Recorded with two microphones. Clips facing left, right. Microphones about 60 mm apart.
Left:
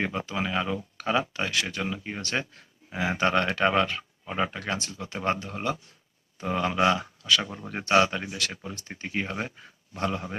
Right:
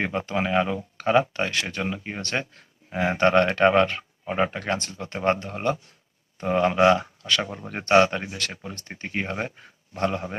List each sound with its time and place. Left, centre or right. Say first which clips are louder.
0.0 s speech: right 3 dB; right